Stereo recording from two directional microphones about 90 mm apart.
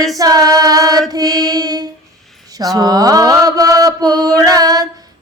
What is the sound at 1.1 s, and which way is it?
Mantra, 45° right (ahead or behind).